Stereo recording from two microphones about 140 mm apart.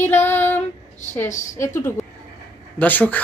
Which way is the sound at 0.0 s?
15° left (ahead or behind).